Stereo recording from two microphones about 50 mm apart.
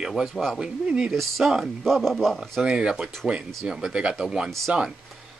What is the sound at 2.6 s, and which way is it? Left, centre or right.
Speech, centre.